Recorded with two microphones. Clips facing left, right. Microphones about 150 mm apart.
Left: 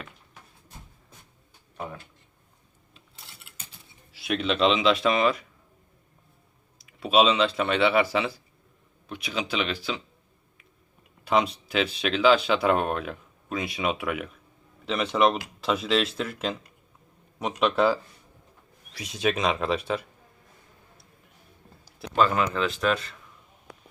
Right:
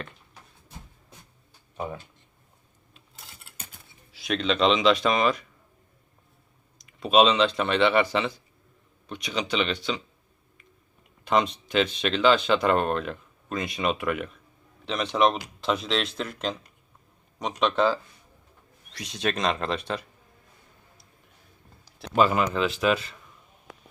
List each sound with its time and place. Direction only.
3.2 s mechanisms: 45° right (ahead or behind)
4.1 s speech: 5° left (ahead or behind)
6.7 s speech: 5° left (ahead or behind)
11.3 s speech: 5° left (ahead or behind)
22.1 s speech: 5° right (ahead or behind)